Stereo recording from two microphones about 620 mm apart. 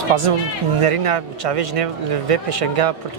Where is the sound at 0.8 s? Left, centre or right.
Right.